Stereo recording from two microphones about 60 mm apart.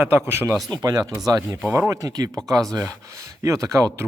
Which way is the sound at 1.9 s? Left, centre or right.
Right.